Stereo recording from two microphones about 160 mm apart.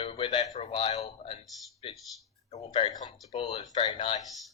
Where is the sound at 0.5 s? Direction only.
40° left (ahead or behind).